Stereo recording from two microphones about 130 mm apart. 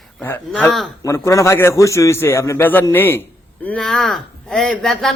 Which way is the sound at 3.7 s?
5° left (ahead or behind).